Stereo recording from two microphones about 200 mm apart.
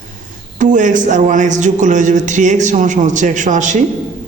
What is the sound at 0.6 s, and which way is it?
Speech, 40° right (ahead or behind).